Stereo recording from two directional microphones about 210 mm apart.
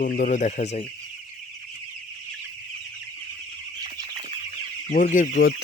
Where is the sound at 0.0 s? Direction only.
40° left (ahead or behind).